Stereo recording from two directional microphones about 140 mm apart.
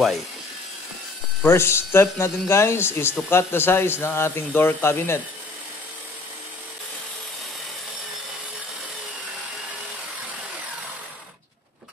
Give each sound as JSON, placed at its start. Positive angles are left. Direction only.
{"t": 1.4, "sound": "a man's voice", "side_deg": 20}